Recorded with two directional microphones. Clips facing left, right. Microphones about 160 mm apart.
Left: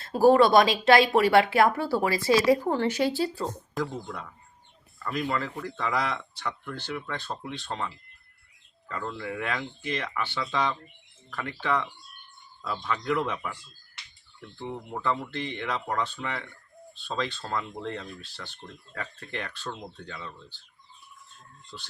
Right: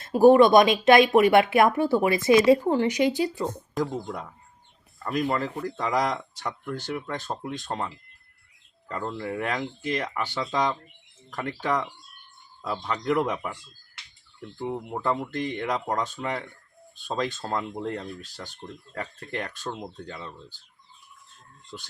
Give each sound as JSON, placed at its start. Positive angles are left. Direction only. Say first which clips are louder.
{"t": 0.0, "sound": "speech", "louder": "right 3 dB", "side_deg": -20}
{"t": 4.0, "sound": "speech", "louder": "right 4 dB", "side_deg": -35}
{"t": 8.9, "sound": "speech", "louder": "right 3 dB", "side_deg": -35}
{"t": 14.9, "sound": "speech", "louder": "right 1 dB", "side_deg": -45}
{"t": 17.4, "sound": "speech", "louder": "right 3 dB", "side_deg": -30}
{"t": 17.8, "sound": "speech", "louder": "right 3 dB", "side_deg": -45}